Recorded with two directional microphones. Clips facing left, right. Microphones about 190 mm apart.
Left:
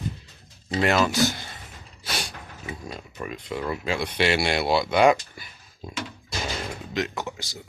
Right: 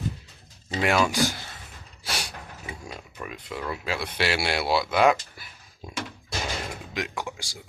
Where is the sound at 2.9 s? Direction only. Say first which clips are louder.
Left 3 dB; 5° left (ahead or behind).